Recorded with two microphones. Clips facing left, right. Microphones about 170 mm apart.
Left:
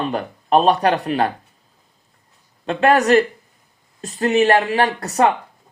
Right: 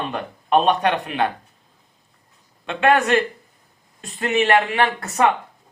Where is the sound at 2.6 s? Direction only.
40° left (ahead or behind).